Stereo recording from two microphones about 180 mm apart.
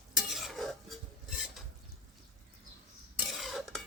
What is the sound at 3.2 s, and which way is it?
Stir, centre (ahead or behind).